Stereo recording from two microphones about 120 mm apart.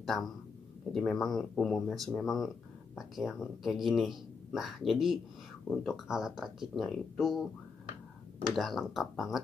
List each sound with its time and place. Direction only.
0.0 s a man's voice: centre (ahead or behind)
8.5 s a man's voice: centre (ahead or behind)